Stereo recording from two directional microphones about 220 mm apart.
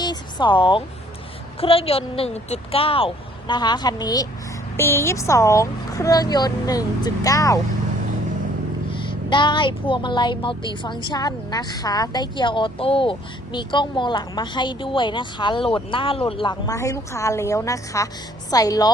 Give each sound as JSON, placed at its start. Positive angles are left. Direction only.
{"t": 0.0, "sound": "a sound", "side_deg": 20}
{"t": 1.6, "sound": "speech", "side_deg": 25}
{"t": 9.0, "sound": "speech", "side_deg": 20}